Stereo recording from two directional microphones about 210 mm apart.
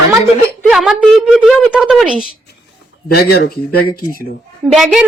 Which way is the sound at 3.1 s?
50° left (ahead or behind).